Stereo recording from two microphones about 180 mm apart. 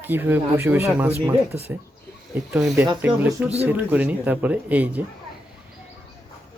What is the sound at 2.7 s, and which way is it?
A man's voice, 15° right (ahead or behind).